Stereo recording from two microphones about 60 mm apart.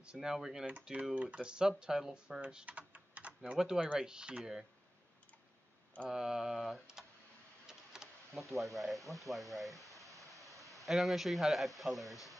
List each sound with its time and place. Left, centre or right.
0.0 s speech: centre
2.9 s typing: right
3.5 s speech: centre
6.0 s speech: centre
7.6 s a sound: centre
8.4 s speech: centre